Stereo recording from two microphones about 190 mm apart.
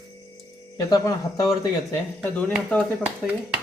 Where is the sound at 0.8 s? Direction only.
20° left (ahead or behind).